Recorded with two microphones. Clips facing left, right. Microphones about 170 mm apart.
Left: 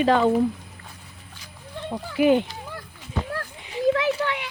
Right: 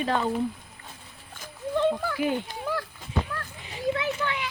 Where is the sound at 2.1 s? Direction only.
90° left.